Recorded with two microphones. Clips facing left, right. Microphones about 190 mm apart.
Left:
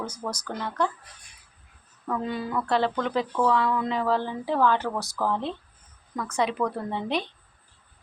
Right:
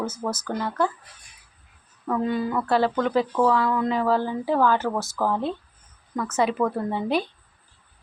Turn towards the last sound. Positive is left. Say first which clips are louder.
# right 4 dB
turn(degrees=-5)  # may be behind; listen again after turning